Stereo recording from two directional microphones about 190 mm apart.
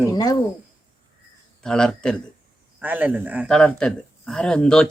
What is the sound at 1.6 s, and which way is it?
Speech, 5° left (ahead or behind).